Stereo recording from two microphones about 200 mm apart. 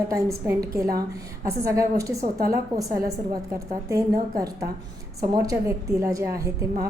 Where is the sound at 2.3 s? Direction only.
50° right (ahead or behind).